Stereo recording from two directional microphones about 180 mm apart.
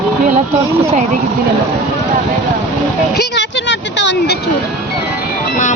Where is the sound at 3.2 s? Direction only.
75° left (ahead or behind).